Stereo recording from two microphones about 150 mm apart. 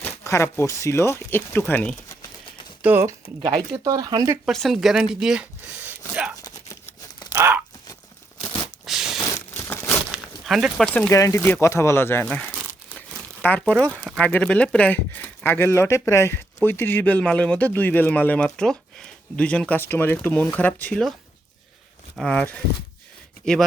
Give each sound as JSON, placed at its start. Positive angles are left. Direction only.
{"t": 0.0, "sound": "a man's voice", "side_deg": 20}
{"t": 2.8, "sound": "speech", "side_deg": -15}
{"t": 4.4, "sound": "speech", "side_deg": 0}
{"t": 6.3, "sound": "a sound", "side_deg": 25}
{"t": 7.3, "sound": "a sound", "side_deg": -15}
{"t": 8.8, "sound": "a sound", "side_deg": -5}
{"t": 9.2, "sound": "crumpling", "side_deg": 15}
{"t": 10.1, "sound": "a sound", "side_deg": -5}
{"t": 11.1, "sound": "a man's voice", "side_deg": 20}
{"t": 13.0, "sound": "crumpling", "side_deg": 10}
{"t": 14.3, "sound": "a man's voice", "side_deg": 10}
{"t": 22.2, "sound": "a man's voice", "side_deg": 10}